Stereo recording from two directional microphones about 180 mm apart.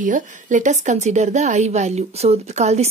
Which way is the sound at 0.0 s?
45° right (ahead or behind).